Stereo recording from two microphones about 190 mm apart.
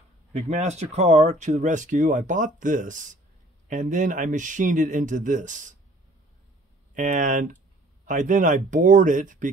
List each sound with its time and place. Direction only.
0.3 s speech: 35° right (ahead or behind)
7.0 s speech: 45° right (ahead or behind)